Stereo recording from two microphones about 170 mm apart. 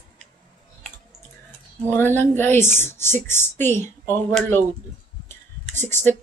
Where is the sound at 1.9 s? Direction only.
15° left (ahead or behind).